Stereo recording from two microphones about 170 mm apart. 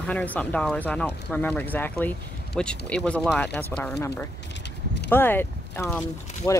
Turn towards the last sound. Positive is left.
turn(degrees=10)  # may be behind; listen again after turning